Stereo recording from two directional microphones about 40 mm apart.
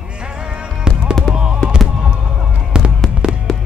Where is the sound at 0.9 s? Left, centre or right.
Right.